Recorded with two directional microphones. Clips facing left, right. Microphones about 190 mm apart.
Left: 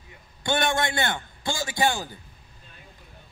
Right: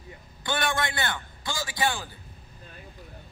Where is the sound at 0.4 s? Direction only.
25° left (ahead or behind).